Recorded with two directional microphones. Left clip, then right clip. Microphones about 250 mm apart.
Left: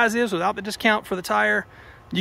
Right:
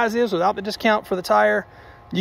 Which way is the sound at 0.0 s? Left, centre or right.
Centre.